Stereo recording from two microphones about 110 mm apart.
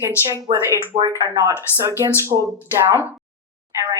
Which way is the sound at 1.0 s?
30° right (ahead or behind).